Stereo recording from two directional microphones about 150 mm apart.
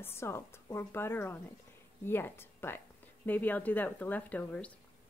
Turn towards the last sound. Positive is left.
turn(degrees=10)  # may be behind; listen again after turning